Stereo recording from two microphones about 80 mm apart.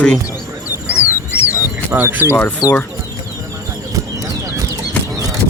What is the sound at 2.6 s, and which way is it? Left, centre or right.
Speech, left.